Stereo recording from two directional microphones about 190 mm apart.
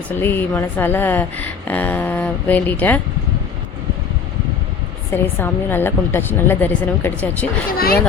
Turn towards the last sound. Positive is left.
turn(degrees=50)  # may be behind; listen again after turning